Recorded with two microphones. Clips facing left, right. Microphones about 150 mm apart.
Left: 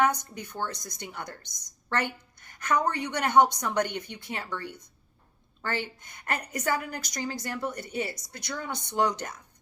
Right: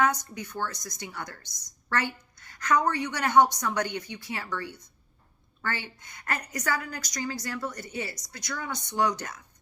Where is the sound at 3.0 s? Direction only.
20° left (ahead or behind).